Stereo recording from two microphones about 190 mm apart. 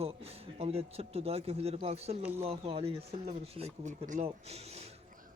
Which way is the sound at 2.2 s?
10° right (ahead or behind).